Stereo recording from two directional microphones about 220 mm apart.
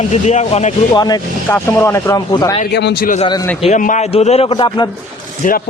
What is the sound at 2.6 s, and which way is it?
Speech, 50° left (ahead or behind).